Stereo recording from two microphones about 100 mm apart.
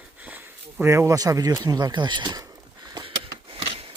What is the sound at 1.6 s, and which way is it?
Speech, 40° right (ahead or behind).